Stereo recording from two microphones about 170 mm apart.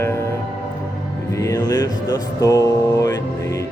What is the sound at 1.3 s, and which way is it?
Speech, 20° left (ahead or behind).